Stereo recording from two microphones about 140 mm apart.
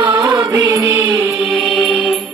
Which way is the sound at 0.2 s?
30° right (ahead or behind).